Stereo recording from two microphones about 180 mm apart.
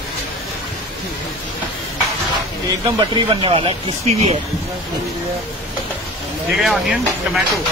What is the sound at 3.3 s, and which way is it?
Speech, 30° right (ahead or behind).